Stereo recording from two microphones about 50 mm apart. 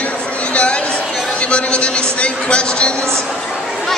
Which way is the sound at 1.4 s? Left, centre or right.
Left.